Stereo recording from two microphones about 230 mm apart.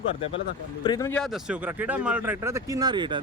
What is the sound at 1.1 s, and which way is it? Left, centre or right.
Speech, centre.